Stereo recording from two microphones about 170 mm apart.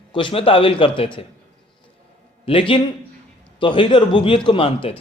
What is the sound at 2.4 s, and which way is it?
Speech, 30° left (ahead or behind).